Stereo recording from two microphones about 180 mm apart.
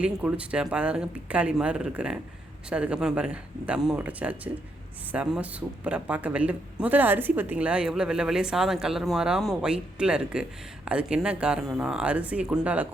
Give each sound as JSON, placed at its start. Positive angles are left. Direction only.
{"t": 0.0, "sound": "speech", "side_deg": -5}